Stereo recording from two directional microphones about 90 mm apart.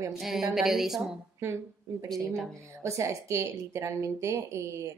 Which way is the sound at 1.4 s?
30° right (ahead or behind).